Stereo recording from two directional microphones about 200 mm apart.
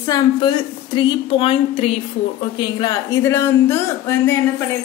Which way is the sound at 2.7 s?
15° left (ahead or behind).